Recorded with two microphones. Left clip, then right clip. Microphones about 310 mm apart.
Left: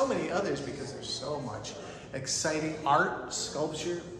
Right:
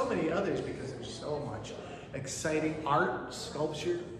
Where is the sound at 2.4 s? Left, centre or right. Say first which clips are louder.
Even; left.